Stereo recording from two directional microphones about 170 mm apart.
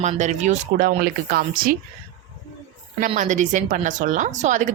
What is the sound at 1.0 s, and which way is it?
Speech, 60° right (ahead or behind).